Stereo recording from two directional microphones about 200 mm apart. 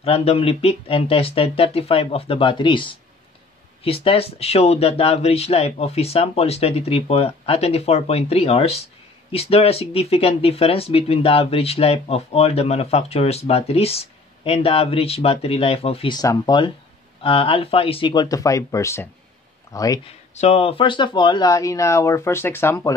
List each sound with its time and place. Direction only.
0.0 s speech: 30° left (ahead or behind)
20.3 s speech: 30° left (ahead or behind); by 22.9 s 10° left (ahead or behind)